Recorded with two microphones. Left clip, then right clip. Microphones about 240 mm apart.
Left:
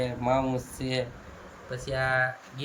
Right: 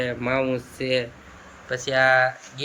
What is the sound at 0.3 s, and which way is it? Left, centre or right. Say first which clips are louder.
Speech: right 4 dB; centre.